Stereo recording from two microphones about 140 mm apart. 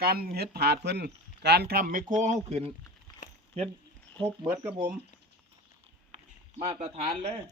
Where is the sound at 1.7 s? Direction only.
85° right.